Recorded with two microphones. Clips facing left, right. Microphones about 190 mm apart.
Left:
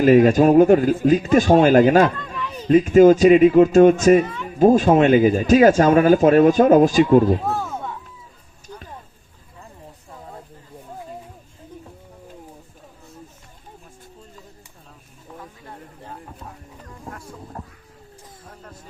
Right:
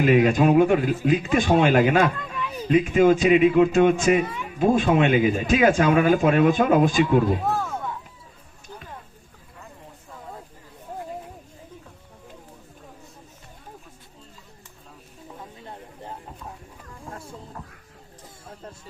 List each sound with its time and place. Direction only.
0.0 s speech: 45° left (ahead or behind)
2.1 s a sound: 5° right (ahead or behind)
2.6 s speech: 40° left (ahead or behind)
4.2 s speech: 10° right (ahead or behind)
4.4 s speech: 40° left (ahead or behind)
17.1 s chicken: 25° right (ahead or behind)